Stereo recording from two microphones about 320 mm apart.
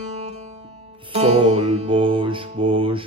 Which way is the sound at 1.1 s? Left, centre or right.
Centre.